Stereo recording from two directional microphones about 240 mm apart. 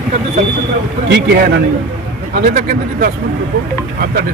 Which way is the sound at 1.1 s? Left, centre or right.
Right.